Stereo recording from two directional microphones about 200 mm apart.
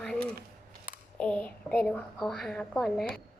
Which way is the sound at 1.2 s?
5° left (ahead or behind).